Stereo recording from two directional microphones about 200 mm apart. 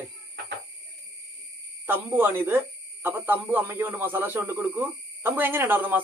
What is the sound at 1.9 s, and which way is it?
Speech, 10° right (ahead or behind).